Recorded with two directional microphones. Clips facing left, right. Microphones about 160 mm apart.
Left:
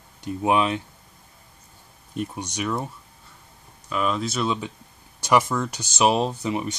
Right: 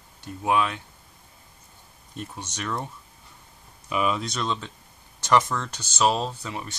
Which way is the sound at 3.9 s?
5° right (ahead or behind).